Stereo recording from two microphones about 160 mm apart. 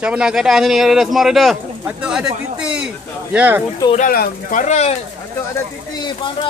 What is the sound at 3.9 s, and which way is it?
Speech, 65° left (ahead or behind).